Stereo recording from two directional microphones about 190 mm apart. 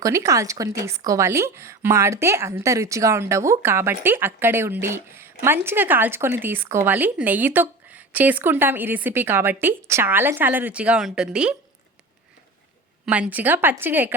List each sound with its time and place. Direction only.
0.0 s a woman's voice: 15° right (ahead or behind)
13.1 s a woman's voice: 5° right (ahead or behind)